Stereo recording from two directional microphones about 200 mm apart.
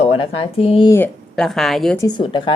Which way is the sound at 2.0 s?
20° left (ahead or behind).